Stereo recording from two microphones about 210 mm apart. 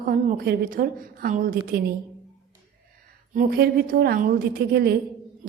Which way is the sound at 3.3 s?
45° right (ahead or behind).